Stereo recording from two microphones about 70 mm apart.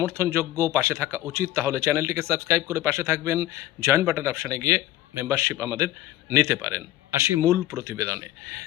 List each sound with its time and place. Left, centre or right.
0.0 s speech: right